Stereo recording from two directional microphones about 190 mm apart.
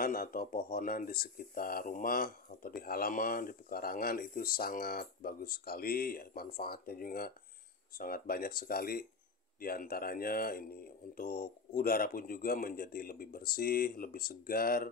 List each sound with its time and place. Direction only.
0.0 s speech: 50° left (ahead or behind)